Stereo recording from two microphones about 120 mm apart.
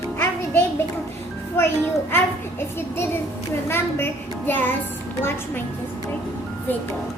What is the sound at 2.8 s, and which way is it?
Child singing, 20° left (ahead or behind).